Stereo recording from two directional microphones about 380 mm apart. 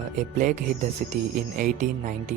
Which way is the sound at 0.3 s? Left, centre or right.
Centre.